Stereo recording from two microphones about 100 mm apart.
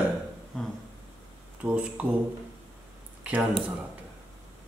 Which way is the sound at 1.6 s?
15° right (ahead or behind).